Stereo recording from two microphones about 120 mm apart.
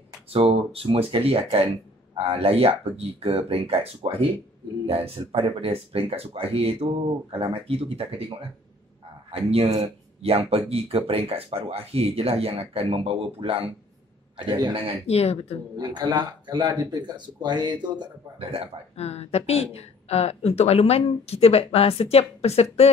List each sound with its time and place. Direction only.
0.3 s speech: 50° right (ahead or behind)
9.3 s a man's voice: 55° right (ahead or behind)
15.0 s speech: 60° left (ahead or behind)
15.8 s speech: 35° right (ahead or behind)
18.9 s speech: 60° left (ahead or behind)